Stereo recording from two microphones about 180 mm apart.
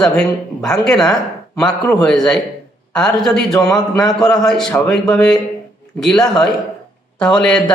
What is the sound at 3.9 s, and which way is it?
Speech, 20° left (ahead or behind).